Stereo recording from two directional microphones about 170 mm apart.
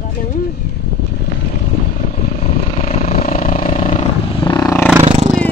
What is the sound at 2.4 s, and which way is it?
Vehicle, 35° left (ahead or behind).